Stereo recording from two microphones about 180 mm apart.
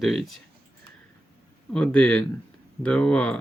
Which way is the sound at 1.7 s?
5° left (ahead or behind).